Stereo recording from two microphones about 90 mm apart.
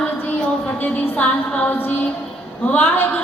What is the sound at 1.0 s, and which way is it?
A capella, 15° left (ahead or behind).